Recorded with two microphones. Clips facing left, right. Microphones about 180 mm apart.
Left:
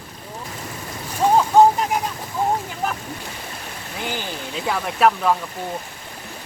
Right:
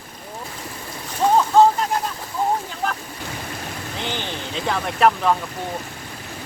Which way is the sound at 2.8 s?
5° left (ahead or behind).